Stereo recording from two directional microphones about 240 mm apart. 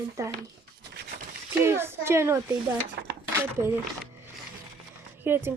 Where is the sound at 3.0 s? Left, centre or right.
Right.